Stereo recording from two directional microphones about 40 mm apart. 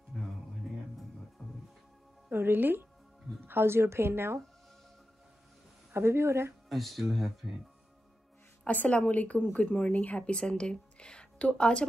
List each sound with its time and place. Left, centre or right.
0.1 s music: centre
1.4 s music: centre
2.3 s speech: right
5.9 s speech: right
6.7 s speech: centre
8.6 s a woman's voice: left